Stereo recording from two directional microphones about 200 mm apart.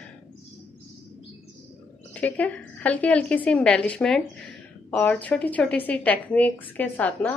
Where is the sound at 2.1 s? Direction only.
5° left (ahead or behind).